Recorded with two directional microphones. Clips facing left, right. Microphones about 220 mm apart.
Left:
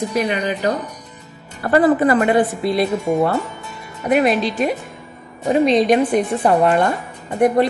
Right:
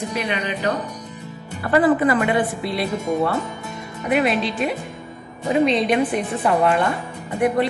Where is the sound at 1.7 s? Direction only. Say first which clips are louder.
Left 3 dB; 40° left (ahead or behind).